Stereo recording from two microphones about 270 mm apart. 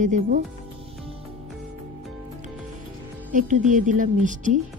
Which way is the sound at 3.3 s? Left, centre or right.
Right.